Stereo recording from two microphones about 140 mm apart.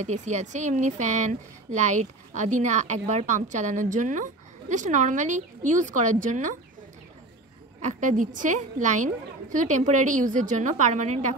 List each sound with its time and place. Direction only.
0.0 s speech: 60° right (ahead or behind)
7.8 s speech: 65° right (ahead or behind)